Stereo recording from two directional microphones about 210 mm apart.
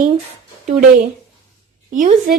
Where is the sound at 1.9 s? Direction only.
40° right (ahead or behind).